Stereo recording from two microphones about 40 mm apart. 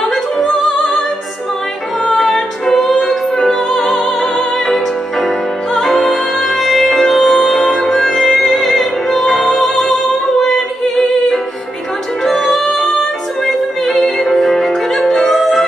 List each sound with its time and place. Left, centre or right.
0.1 s music: centre
2.0 s music: centre